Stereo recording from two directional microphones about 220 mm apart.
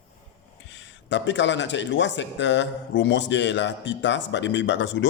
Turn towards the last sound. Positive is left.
turn(degrees=55)  # may be behind; listen again after turning